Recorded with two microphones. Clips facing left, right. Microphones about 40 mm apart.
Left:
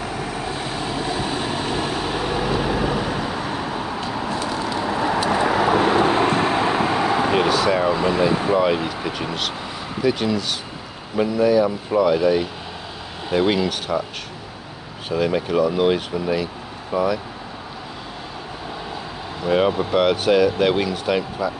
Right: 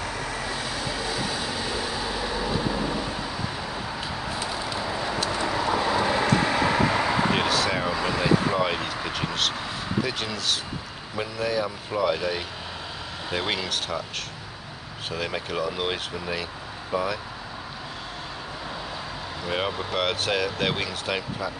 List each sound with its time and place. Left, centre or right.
0.3 s vehicle: left
4.3 s a sound: centre
4.8 s a sound: left
5.3 s vehicle: left
7.3 s air conditioning: centre
7.9 s speech: left
8.5 s speech: centre
15.0 s speech: centre
19.5 s speech: centre